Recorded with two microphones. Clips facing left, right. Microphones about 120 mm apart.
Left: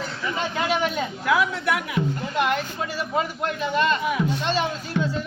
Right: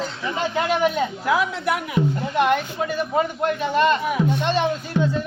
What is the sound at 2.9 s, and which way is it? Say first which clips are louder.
A man's voice: right 4 dB; 45° right (ahead or behind).